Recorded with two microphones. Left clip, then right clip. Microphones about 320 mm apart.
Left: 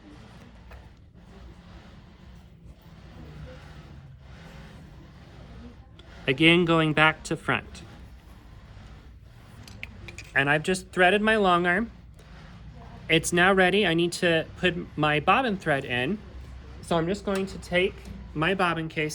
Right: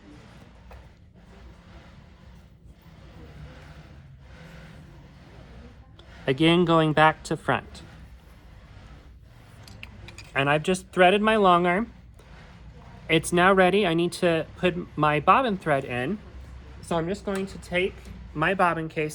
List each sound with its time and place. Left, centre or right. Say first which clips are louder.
6.2 s speech: left 1 dB; centre
10.3 s speech: even; centre
13.1 s speech: right 1 dB; centre
16.8 s a woman's voice: left 1 dB; centre